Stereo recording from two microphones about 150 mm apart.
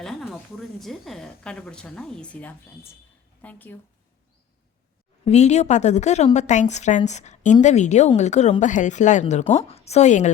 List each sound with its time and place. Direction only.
0.0 s a sound: centre (ahead or behind)
0.8 s a woman's voice: centre (ahead or behind)
5.2 s a woman's voice: 50° left (ahead or behind)